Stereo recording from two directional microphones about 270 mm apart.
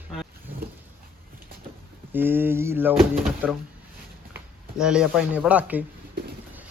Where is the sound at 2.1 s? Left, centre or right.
Centre.